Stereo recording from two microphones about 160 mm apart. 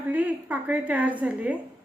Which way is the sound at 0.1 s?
10° right (ahead or behind).